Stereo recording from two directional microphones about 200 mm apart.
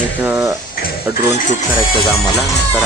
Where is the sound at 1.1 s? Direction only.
45° left (ahead or behind).